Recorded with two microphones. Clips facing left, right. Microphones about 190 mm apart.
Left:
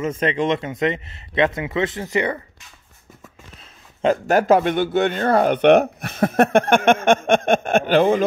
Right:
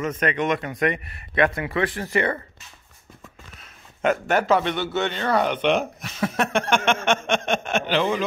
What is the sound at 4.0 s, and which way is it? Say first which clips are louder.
A man's voice: left 4 dB; 35° left (ahead or behind).